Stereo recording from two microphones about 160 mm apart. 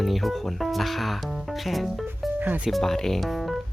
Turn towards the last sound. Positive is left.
turn(degrees=0)  # may be behind; listen again after turning